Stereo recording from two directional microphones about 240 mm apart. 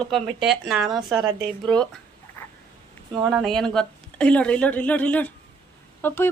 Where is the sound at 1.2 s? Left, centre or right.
Centre.